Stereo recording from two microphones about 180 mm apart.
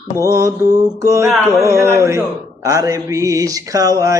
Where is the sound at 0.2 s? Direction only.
15° right (ahead or behind).